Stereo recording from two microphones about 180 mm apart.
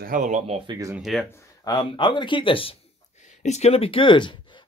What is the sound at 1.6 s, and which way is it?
Speech, 25° left (ahead or behind).